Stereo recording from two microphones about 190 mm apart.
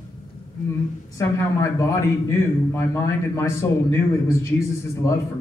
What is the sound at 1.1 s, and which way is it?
A man's voice, 15° left (ahead or behind).